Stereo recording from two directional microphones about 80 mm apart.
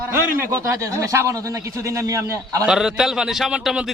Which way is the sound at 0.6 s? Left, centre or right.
Right.